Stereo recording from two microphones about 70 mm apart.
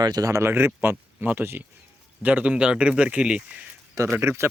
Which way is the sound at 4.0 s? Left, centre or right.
Right.